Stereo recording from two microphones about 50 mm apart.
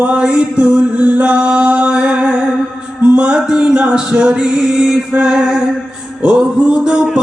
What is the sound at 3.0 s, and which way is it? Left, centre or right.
Music, right.